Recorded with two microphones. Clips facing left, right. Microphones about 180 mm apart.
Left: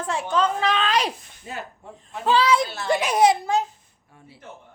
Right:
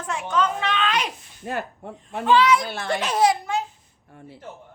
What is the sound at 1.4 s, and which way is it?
Speech, 60° right (ahead or behind).